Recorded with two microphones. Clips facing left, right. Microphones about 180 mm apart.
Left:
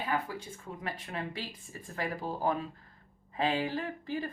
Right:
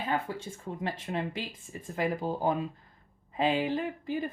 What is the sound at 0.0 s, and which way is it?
Speech, 25° right (ahead or behind).